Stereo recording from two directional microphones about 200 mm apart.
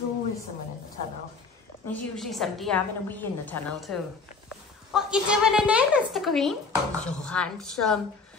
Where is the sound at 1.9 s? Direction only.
Centre (ahead or behind).